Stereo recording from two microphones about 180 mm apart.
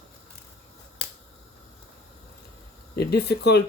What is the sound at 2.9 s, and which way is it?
Speech, 65° left (ahead or behind).